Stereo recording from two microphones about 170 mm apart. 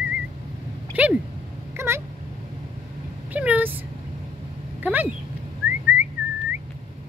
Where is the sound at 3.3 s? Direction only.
10° right (ahead or behind).